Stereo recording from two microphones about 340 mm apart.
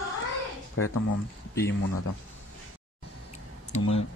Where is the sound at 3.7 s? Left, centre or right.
Centre.